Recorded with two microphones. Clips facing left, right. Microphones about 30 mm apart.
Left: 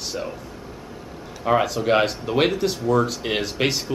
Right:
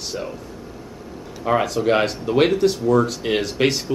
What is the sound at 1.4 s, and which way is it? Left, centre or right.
Speech, centre.